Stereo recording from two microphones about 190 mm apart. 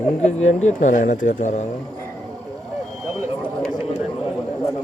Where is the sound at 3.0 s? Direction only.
5° left (ahead or behind).